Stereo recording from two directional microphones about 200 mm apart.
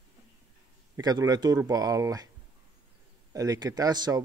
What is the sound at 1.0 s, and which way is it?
A man's voice, 20° right (ahead or behind).